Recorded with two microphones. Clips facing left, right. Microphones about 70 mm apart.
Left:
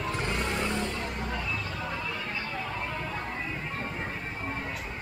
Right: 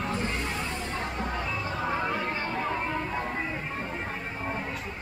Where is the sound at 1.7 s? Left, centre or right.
Right.